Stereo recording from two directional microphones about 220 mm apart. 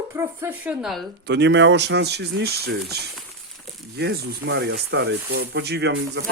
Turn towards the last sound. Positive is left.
turn(degrees=-55)  # may be behind; listen again after turning